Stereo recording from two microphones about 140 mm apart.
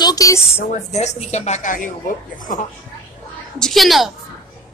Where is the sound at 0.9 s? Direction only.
55° left (ahead or behind); by 2.6 s 70° left (ahead or behind).